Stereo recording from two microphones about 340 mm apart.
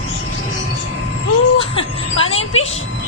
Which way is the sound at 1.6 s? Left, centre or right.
Centre.